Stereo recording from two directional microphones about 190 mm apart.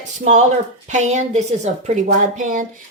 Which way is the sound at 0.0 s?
40° right (ahead or behind).